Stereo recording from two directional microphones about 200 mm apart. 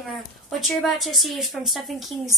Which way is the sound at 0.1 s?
Centre (ahead or behind).